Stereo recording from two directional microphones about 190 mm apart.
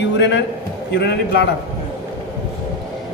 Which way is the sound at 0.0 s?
65° left (ahead or behind).